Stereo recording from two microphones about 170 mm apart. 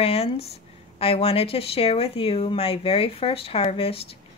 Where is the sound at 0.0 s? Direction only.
35° left (ahead or behind).